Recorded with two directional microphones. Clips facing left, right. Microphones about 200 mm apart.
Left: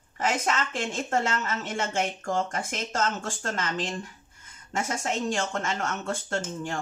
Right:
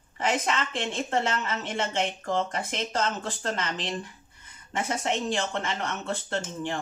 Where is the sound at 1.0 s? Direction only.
45° left (ahead or behind).